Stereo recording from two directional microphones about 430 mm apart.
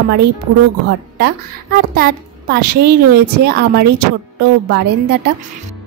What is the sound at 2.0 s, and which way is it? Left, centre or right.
A child's voice, right.